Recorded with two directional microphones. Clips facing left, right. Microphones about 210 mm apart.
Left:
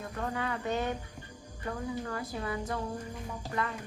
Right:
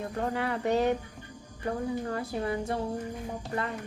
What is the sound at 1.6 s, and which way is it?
Speech, 30° right (ahead or behind).